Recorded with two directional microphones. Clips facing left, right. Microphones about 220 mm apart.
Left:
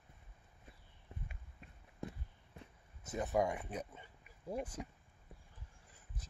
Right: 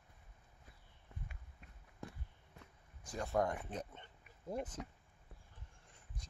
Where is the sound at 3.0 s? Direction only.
20° left (ahead or behind).